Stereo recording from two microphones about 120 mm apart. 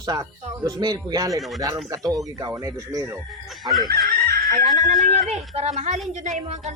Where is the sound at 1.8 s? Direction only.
30° right (ahead or behind).